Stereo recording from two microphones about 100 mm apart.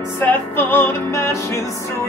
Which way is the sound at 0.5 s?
25° left (ahead or behind).